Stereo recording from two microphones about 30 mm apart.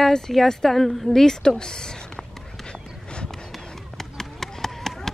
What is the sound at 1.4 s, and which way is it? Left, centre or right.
Speech, left.